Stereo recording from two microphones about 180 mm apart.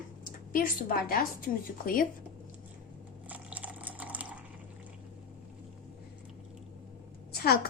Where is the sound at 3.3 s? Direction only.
10° right (ahead or behind).